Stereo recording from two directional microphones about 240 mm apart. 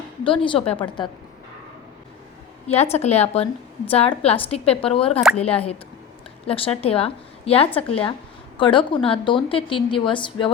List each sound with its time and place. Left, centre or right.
0.3 s a woman's voice: left
2.6 s a woman's voice: left